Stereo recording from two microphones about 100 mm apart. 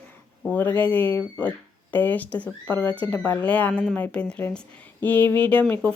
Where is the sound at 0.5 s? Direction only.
15° left (ahead or behind).